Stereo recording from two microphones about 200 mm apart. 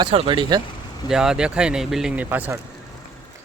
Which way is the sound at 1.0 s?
5° right (ahead or behind).